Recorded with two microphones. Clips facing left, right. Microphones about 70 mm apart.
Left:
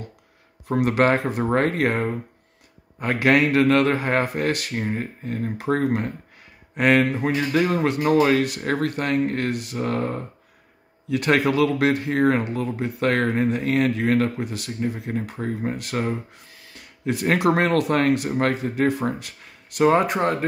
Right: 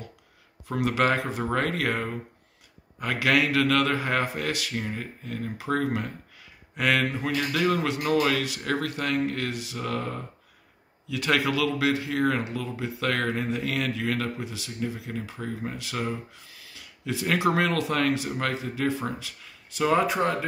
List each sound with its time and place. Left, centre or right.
0.7 s speech: left
14.8 s speech: left